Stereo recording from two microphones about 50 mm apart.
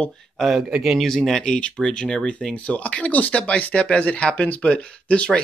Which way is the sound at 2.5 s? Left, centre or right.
Left.